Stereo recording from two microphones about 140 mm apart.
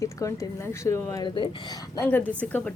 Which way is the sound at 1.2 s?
35° left (ahead or behind).